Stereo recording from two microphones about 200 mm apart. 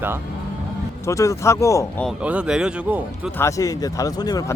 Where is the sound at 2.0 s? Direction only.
5° right (ahead or behind).